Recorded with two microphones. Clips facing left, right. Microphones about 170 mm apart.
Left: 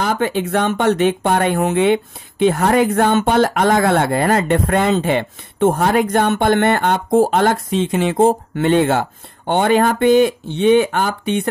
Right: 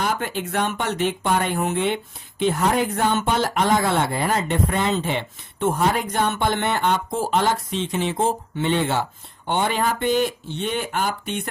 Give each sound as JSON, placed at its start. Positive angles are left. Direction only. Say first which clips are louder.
{"t": 0.0, "sound": "speech", "louder": "left 6 dB", "side_deg": 85}